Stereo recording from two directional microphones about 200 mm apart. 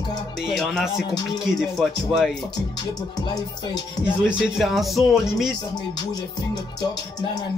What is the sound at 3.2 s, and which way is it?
Music, 20° left (ahead or behind).